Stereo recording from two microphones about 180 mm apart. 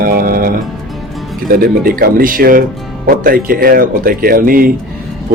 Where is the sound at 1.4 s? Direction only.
55° right (ahead or behind).